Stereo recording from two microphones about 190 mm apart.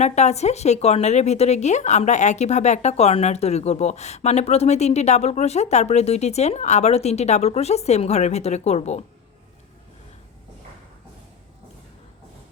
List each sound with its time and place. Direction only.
0.0 s speech: 35° left (ahead or behind)